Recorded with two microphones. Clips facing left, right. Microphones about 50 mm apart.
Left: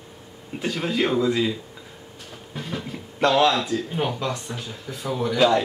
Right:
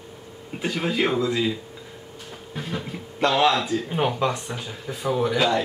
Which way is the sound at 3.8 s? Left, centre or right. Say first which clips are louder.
Right 3 dB; centre.